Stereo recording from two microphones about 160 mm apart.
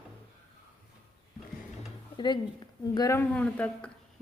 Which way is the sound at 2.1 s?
30° left (ahead or behind).